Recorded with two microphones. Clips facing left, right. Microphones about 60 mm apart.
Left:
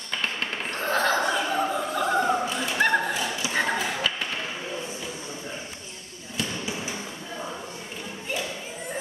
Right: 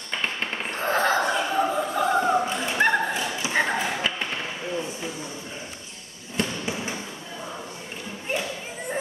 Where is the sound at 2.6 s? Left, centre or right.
Right.